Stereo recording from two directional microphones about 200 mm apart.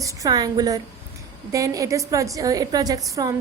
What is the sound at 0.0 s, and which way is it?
A woman's voice, 15° right (ahead or behind).